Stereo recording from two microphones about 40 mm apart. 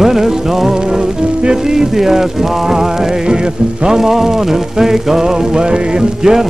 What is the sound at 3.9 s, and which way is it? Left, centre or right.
Music, centre.